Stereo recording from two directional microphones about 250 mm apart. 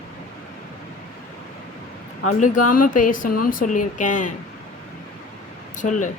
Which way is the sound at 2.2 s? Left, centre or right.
Left.